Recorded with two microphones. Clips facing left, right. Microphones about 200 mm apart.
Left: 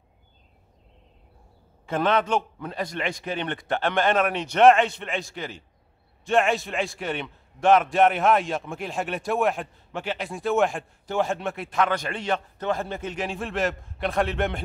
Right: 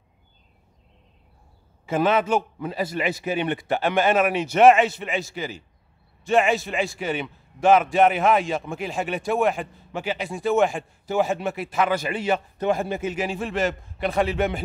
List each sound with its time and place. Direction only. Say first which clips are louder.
1.9 s a man's voice: right 2 dB; 5° right (ahead or behind)